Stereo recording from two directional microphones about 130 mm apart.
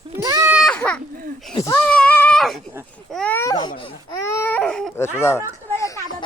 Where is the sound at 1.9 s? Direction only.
10° left (ahead or behind).